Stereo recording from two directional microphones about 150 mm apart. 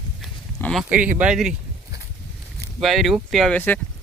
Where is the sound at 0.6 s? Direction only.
5° left (ahead or behind).